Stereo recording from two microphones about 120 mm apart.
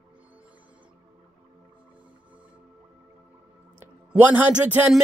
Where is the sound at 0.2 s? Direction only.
10° right (ahead or behind).